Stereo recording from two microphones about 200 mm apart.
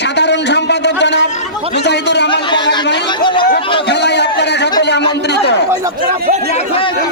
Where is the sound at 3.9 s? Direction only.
60° left (ahead or behind).